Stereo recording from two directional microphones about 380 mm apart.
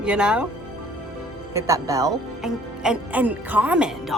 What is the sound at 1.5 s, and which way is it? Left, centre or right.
Speech, centre.